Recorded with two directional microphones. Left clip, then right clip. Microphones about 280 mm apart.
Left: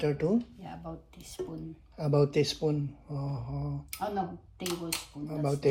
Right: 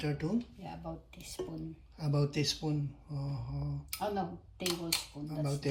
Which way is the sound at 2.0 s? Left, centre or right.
Left.